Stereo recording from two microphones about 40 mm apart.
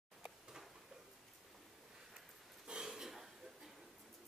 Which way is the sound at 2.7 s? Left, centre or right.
Centre.